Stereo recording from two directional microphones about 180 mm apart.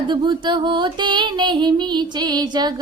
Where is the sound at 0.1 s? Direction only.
25° right (ahead or behind).